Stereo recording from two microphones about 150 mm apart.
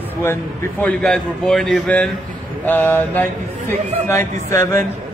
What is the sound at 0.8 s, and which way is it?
A man's voice, 5° left (ahead or behind).